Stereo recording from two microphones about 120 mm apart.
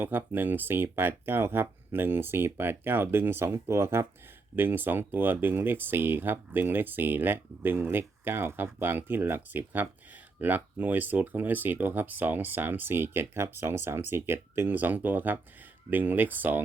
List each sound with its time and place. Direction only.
0.0 s speech: 15° right (ahead or behind)